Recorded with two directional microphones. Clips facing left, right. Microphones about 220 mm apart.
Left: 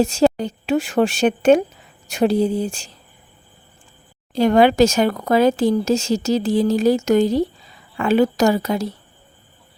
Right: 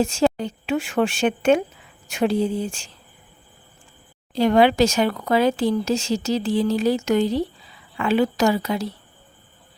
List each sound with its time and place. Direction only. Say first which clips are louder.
0.0 s speech: left 4 dB; 40° left (ahead or behind)
4.3 s speech: left 2 dB; 45° left (ahead or behind)